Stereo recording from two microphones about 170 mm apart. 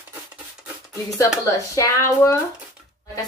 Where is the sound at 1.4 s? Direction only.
20° left (ahead or behind).